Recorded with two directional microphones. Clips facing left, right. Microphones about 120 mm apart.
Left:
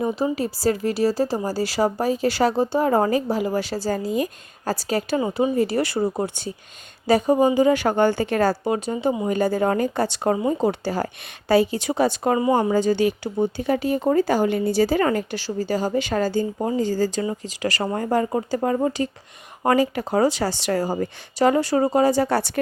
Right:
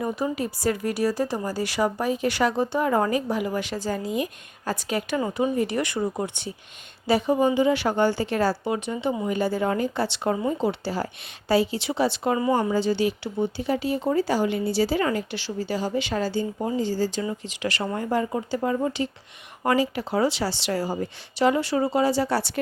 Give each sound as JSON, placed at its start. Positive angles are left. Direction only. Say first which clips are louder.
{"t": 0.3, "sound": "speech", "louder": "left 3 dB", "side_deg": 30}